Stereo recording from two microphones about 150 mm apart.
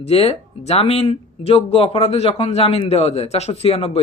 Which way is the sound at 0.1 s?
40° left (ahead or behind).